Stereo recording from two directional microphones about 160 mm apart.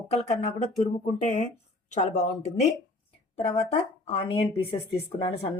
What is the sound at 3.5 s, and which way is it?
A woman's voice, 40° left (ahead or behind).